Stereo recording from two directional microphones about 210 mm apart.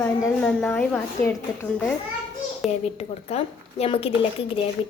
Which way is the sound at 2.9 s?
30° left (ahead or behind).